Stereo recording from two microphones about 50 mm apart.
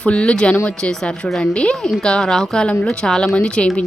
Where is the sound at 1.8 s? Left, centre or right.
Centre.